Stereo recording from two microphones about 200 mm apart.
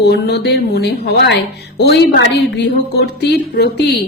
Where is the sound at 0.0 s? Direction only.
55° left (ahead or behind).